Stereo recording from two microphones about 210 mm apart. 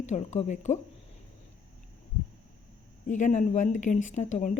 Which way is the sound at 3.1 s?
35° left (ahead or behind).